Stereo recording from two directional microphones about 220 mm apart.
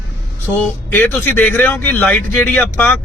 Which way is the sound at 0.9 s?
10° left (ahead or behind).